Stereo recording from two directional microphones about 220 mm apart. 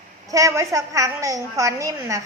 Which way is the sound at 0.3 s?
15° right (ahead or behind).